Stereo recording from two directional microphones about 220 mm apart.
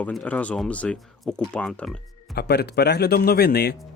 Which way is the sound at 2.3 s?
45° left (ahead or behind).